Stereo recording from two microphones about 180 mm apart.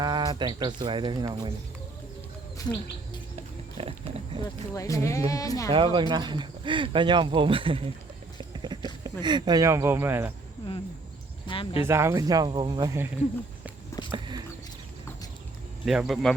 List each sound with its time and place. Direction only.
0.0 s speech: 25° right (ahead or behind)
3.8 s pig: 30° right (ahead or behind)
4.4 s speech: 20° left (ahead or behind)
5.7 s speech: 25° right (ahead or behind)
8.4 s a sound: 25° right (ahead or behind)
9.0 s speech: 25° right (ahead or behind)
11.4 s speech: 30° left (ahead or behind)
11.9 s speech: 15° right (ahead or behind)
14.0 s a sound: 20° left (ahead or behind)
15.9 s speech: centre (ahead or behind)